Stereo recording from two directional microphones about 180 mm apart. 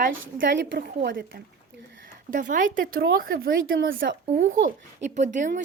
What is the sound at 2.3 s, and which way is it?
A woman's voice, 45° right (ahead or behind).